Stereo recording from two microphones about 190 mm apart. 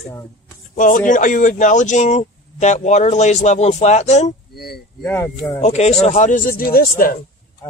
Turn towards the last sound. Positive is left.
turn(degrees=50)  # may be behind; listen again after turning